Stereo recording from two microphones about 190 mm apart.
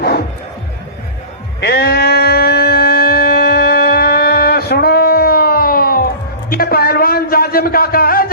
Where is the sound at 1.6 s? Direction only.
55° left (ahead or behind).